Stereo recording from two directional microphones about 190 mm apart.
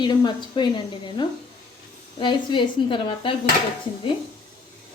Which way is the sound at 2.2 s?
25° left (ahead or behind).